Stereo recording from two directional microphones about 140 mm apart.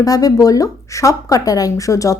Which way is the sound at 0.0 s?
25° left (ahead or behind).